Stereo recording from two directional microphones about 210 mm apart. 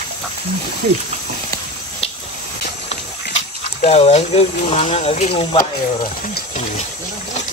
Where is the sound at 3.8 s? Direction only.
30° left (ahead or behind).